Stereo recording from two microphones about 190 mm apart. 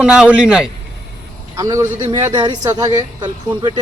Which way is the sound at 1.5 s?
15° right (ahead or behind).